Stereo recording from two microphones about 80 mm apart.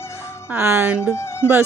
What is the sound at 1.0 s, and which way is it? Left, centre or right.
Speech, left.